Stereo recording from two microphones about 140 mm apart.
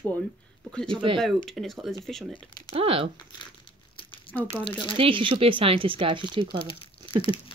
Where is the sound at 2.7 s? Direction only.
45° right (ahead or behind).